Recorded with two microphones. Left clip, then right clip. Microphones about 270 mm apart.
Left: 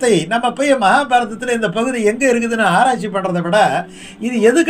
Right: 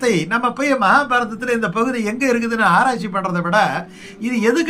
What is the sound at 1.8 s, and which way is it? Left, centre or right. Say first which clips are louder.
Speech: left 4 dB; right.